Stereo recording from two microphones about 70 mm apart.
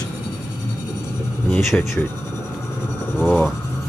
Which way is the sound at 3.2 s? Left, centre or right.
Centre.